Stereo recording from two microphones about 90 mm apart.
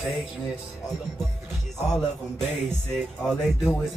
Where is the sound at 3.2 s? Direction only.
5° left (ahead or behind).